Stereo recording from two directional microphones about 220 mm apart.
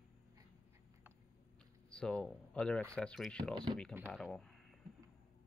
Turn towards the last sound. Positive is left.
turn(degrees=0)  # may be behind; listen again after turning